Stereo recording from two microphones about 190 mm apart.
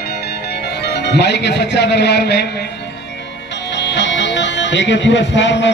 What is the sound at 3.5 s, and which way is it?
Speech, 70° left (ahead or behind).